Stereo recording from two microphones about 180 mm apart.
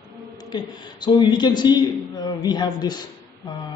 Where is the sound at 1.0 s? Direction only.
25° left (ahead or behind).